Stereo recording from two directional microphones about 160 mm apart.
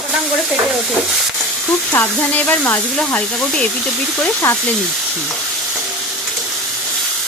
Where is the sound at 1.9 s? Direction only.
10° left (ahead or behind).